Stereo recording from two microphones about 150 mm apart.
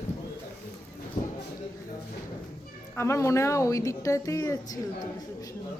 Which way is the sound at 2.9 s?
20° left (ahead or behind).